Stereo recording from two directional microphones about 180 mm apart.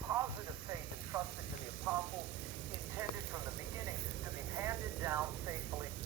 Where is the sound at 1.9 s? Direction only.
15° right (ahead or behind).